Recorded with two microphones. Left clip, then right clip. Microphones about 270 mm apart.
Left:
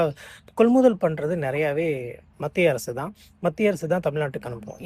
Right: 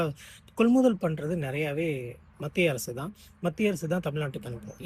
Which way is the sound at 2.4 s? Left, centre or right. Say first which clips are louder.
Left 6 dB; centre.